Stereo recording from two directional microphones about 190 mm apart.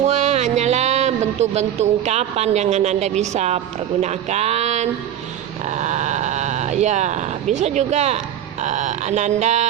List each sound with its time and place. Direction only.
0.0 s speech: 35° right (ahead or behind)